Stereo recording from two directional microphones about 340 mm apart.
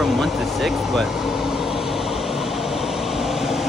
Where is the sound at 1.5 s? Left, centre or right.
Centre.